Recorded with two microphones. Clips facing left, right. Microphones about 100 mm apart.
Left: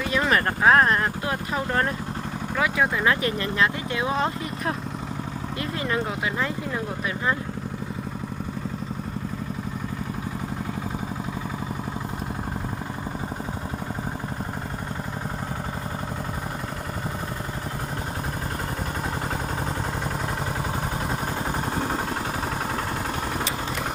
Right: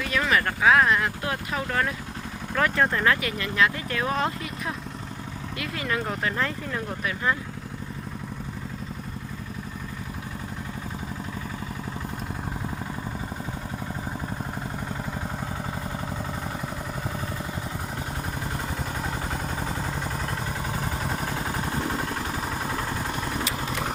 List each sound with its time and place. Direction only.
0.3 s a sound: 40° left (ahead or behind)
2.6 s speech: 5° left (ahead or behind)
3.2 s speech: 35° left (ahead or behind)
4.1 s speech: centre (ahead or behind)
6.1 s speech: 10° left (ahead or behind)